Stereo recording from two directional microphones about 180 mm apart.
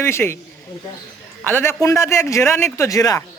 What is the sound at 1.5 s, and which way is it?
A man's voice, 10° left (ahead or behind).